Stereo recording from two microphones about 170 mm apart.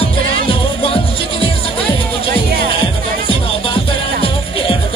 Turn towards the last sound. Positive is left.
turn(degrees=35)  # may be behind; listen again after turning